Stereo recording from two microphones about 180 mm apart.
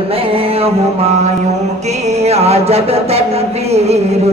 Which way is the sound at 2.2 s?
35° right (ahead or behind).